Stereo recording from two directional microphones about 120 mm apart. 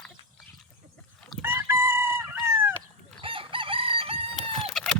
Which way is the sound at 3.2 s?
45° right (ahead or behind).